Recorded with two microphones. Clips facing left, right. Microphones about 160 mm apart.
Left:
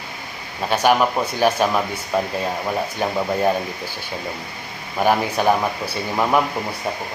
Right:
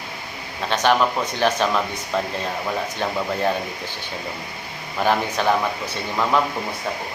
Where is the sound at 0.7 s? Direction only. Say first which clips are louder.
Left 2 dB; 10° left (ahead or behind).